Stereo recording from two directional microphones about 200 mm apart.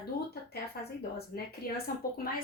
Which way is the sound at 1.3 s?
50° left (ahead or behind).